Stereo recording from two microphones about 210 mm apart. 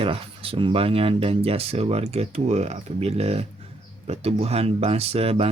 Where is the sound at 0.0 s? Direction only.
25° right (ahead or behind).